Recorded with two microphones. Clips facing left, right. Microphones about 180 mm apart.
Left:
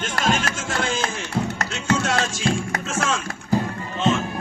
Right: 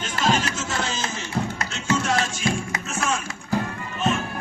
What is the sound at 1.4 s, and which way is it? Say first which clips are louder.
Music: left 2 dB; 65° left (ahead or behind).